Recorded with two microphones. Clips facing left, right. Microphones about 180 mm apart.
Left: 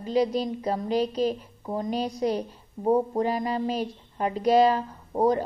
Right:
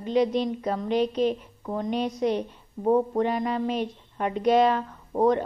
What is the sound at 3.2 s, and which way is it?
A woman's voice, 35° left (ahead or behind).